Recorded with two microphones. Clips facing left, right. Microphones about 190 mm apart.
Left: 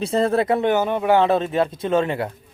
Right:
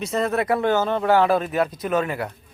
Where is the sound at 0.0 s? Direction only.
30° left (ahead or behind).